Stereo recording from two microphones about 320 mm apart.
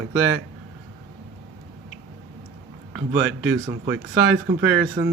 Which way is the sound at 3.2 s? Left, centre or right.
Right.